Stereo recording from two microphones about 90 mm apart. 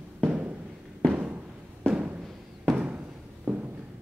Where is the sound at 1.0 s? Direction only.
10° left (ahead or behind).